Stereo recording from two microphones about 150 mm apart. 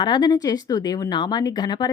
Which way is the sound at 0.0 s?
30° left (ahead or behind).